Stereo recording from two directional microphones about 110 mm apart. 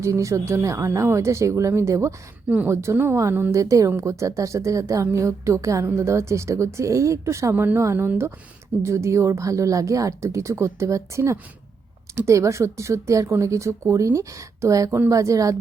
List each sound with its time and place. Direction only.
0.0 s a woman's voice: 30° right (ahead or behind)
2.5 s a woman's voice: 15° right (ahead or behind); by 15.5 s 30° right (ahead or behind)